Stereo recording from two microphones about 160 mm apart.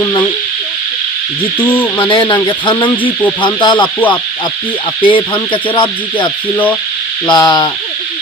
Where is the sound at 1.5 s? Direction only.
10° left (ahead or behind).